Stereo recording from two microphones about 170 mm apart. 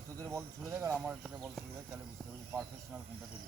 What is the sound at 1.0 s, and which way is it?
Speech, 5° right (ahead or behind).